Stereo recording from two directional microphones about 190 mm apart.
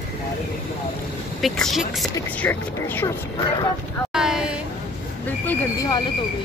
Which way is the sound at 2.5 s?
10° left (ahead or behind).